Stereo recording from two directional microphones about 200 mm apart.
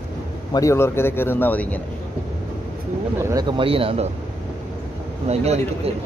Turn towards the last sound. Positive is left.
turn(degrees=-30)  # may be behind; listen again after turning